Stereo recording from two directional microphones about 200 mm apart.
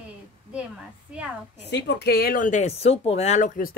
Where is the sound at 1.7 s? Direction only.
55° left (ahead or behind).